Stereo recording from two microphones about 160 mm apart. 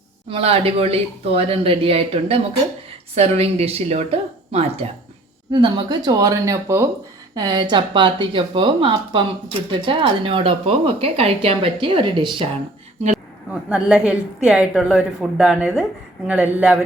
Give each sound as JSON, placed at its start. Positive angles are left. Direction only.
{"t": 0.3, "sound": "speech", "side_deg": -35}
{"t": 5.5, "sound": "speech", "side_deg": -30}
{"t": 13.5, "sound": "a woman's voice", "side_deg": -5}